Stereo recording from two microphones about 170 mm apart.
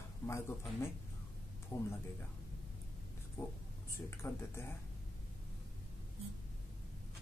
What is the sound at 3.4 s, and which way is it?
Speech, 15° left (ahead or behind).